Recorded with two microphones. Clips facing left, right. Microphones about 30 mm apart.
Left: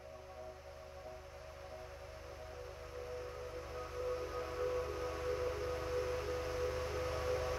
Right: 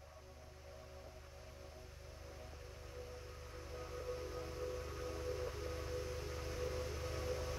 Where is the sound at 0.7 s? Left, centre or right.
Centre.